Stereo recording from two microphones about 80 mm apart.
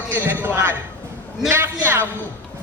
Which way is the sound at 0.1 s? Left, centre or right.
Right.